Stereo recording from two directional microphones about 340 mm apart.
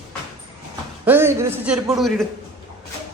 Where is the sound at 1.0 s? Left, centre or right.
Centre.